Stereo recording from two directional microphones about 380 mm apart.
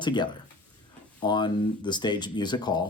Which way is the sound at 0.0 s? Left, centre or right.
Centre.